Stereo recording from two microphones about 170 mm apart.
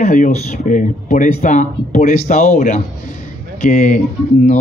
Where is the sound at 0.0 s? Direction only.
45° left (ahead or behind).